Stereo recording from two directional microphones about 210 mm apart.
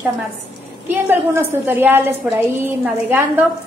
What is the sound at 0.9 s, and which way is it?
A woman's voice, 10° right (ahead or behind).